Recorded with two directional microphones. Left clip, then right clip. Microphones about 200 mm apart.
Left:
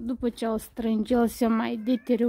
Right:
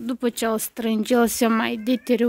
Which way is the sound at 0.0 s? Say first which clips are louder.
Right 5 dB; centre (ahead or behind).